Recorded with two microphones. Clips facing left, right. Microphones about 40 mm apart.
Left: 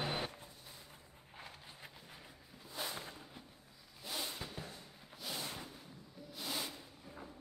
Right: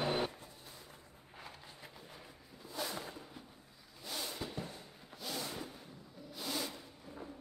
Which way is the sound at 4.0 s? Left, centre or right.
Centre.